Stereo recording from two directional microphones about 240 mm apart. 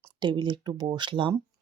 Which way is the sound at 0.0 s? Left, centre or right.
Centre.